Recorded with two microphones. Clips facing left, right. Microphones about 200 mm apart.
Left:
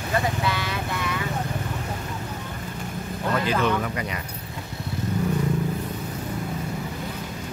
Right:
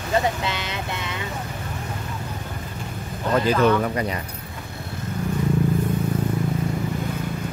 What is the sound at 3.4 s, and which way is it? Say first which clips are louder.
Speech: right 7 dB; 35° right (ahead or behind).